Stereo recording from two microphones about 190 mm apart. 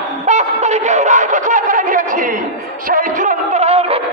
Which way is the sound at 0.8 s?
40° right (ahead or behind).